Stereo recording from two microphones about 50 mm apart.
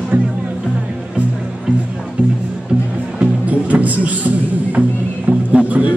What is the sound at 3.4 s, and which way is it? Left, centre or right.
Music, right.